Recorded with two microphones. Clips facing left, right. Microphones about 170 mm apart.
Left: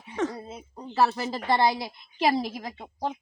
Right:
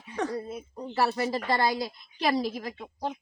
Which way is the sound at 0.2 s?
25° left (ahead or behind).